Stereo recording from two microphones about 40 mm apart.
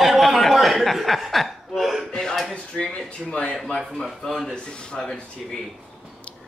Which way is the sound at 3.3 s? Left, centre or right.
Left.